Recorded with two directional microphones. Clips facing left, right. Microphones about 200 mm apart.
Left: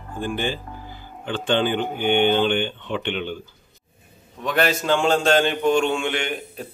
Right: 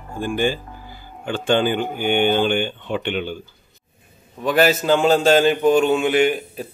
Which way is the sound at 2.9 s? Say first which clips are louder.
Right 4 dB; 45° right (ahead or behind).